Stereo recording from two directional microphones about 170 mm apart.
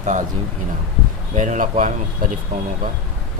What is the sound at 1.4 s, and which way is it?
Speech, 50° right (ahead or behind).